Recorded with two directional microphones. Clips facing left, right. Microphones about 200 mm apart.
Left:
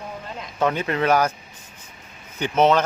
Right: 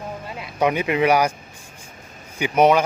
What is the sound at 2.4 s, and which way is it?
Speech, 10° right (ahead or behind).